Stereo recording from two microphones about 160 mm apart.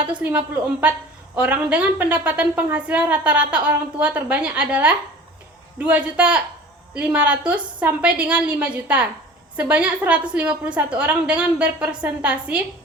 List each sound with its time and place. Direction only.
0.2 s a woman's voice: 10° right (ahead or behind)